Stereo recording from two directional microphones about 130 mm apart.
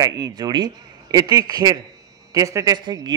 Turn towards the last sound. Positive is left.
turn(degrees=-35)  # may be behind; listen again after turning